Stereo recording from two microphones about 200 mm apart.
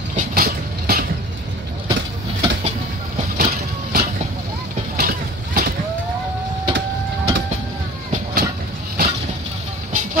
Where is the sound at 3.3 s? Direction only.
45° right (ahead or behind).